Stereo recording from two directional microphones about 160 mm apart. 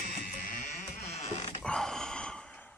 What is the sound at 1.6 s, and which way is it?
Sigh, 5° left (ahead or behind).